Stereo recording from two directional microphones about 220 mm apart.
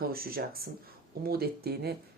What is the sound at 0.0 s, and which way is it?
Speech, 45° right (ahead or behind).